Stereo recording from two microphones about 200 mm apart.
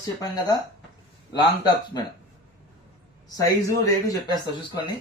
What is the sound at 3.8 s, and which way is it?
Speech, 20° left (ahead or behind).